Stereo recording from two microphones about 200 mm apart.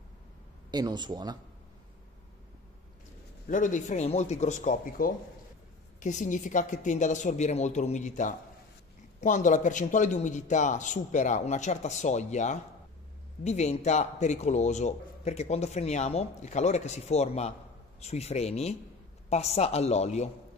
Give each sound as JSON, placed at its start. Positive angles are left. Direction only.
{"t": 0.7, "sound": "speech", "side_deg": -20}
{"t": 3.4, "sound": "a man's voice", "side_deg": 40}